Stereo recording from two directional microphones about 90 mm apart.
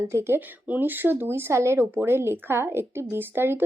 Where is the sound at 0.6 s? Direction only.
20° right (ahead or behind).